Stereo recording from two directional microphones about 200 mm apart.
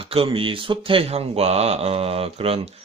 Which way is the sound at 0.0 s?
25° right (ahead or behind).